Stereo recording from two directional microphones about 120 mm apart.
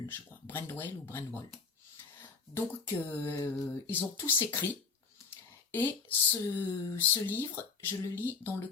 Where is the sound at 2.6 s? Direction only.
20° left (ahead or behind).